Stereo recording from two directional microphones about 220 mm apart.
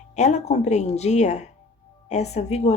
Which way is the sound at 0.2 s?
30° left (ahead or behind).